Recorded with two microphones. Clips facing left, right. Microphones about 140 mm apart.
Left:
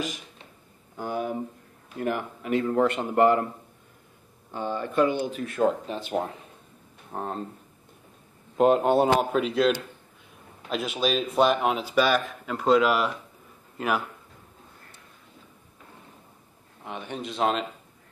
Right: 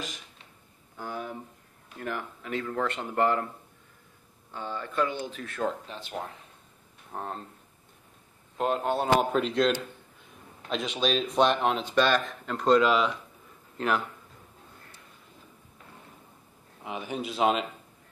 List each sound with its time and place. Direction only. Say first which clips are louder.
0.9 s a sound: left 7 dB; 15° left (ahead or behind)
2.0 s speech: left 6 dB; 15° left (ahead or behind)
2.6 s speech: left 8 dB; 25° left (ahead or behind)
2.9 s speech: left 2 dB; 15° left (ahead or behind)
4.5 s speech: left 6 dB; 20° left (ahead or behind)
8.5 s speech: left 8 dB; 10° left (ahead or behind)
16.8 s speech: right 1 dB; 5° right (ahead or behind)